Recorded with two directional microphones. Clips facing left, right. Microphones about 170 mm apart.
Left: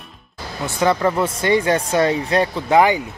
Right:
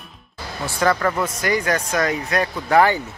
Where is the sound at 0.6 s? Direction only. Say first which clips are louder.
Left 2 dB; 20° left (ahead or behind).